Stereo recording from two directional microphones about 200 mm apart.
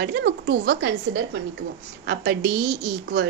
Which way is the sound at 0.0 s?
55° right (ahead or behind).